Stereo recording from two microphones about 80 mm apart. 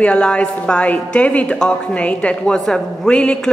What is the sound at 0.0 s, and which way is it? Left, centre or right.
A woman's voice, centre.